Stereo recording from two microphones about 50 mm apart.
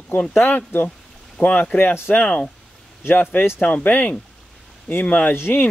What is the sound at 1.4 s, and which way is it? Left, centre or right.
Speech, left.